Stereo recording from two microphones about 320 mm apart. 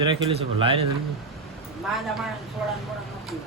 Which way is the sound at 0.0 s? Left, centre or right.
Centre.